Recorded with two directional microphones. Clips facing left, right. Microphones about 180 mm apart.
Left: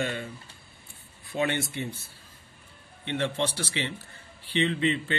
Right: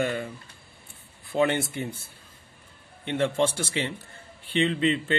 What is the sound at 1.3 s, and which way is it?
Speech, 65° right (ahead or behind).